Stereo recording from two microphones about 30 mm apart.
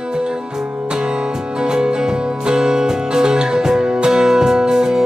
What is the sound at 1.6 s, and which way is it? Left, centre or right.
Music, right.